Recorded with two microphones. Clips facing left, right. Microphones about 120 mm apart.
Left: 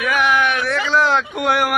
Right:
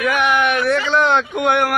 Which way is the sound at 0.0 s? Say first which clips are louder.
Right 1 dB; centre (ahead or behind).